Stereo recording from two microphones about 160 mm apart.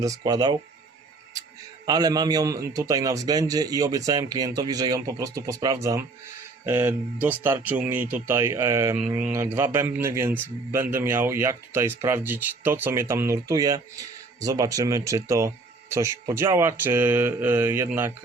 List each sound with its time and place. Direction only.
0.0 s a man's voice: 20° right (ahead or behind)
1.9 s a man's voice: 25° right (ahead or behind)